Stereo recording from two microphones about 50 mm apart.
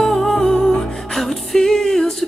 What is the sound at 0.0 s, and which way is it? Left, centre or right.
Music, centre.